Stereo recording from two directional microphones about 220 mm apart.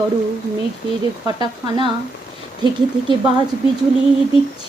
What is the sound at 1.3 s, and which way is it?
Speech, 20° right (ahead or behind).